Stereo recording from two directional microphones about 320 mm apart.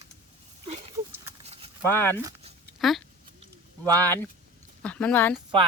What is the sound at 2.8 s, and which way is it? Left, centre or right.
Speech, centre.